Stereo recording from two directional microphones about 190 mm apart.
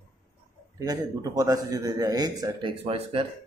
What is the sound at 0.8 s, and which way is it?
A man's voice, 20° right (ahead or behind).